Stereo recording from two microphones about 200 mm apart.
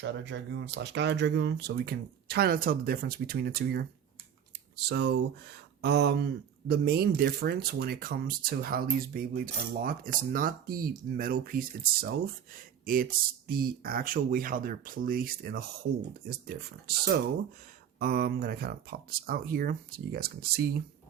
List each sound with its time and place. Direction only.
0.0 s speech: 60° right (ahead or behind)